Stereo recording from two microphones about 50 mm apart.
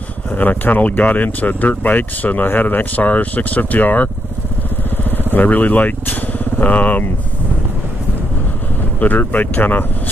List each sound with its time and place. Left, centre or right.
0.3 s speech: left
5.3 s speech: left
9.0 s speech: left